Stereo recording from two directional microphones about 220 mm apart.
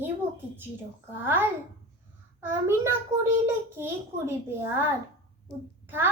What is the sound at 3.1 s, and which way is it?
Speech, 30° right (ahead or behind).